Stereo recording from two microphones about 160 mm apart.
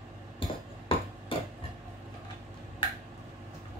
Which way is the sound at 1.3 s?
35° left (ahead or behind).